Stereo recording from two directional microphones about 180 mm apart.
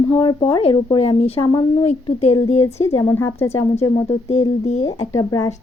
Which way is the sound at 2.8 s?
15° left (ahead or behind).